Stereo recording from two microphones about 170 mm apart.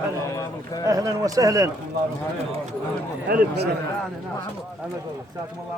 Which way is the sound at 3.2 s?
65° right (ahead or behind).